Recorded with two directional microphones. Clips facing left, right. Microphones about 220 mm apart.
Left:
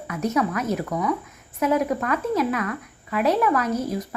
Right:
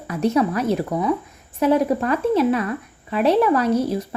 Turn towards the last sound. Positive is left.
turn(degrees=-30)  # may be behind; listen again after turning